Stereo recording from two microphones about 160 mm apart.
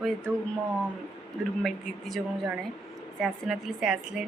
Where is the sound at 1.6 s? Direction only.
Centre (ahead or behind).